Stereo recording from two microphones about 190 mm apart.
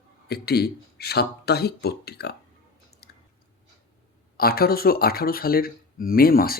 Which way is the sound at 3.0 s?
55° left (ahead or behind).